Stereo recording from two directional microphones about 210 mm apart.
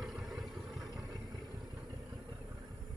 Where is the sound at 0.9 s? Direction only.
15° right (ahead or behind).